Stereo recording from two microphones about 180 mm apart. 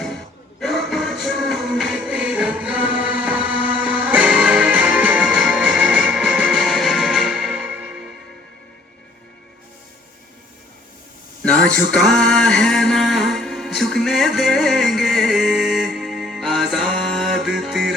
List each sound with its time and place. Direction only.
0.6 s music: centre (ahead or behind)
11.9 s music: centre (ahead or behind)